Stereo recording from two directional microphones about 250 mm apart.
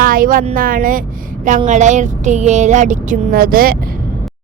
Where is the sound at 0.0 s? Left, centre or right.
Right.